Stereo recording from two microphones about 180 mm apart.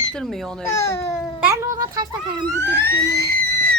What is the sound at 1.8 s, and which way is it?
Speech, 20° right (ahead or behind).